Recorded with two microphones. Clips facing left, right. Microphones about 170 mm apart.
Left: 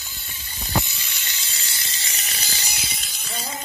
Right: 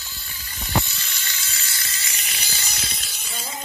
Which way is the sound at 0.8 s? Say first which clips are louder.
Right 1 dB; 15° left (ahead or behind).